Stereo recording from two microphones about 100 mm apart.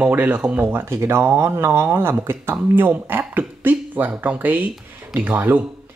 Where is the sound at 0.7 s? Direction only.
25° right (ahead or behind).